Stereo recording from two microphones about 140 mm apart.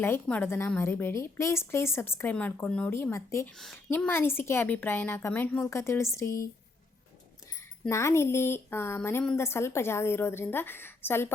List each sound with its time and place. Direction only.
0.0 s a woman's voice: 15° left (ahead or behind)
2.9 s speech: 20° left (ahead or behind)
3.5 s a woman's voice: centre (ahead or behind)
3.8 s a woman's voice: 15° left (ahead or behind)
7.5 s a woman's voice: 20° left (ahead or behind)